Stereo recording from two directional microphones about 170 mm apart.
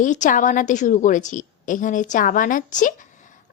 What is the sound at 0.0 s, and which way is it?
A woman's voice, 50° left (ahead or behind).